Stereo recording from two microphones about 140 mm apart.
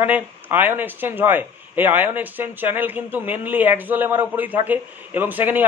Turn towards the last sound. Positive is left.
turn(degrees=-15)  # may be behind; listen again after turning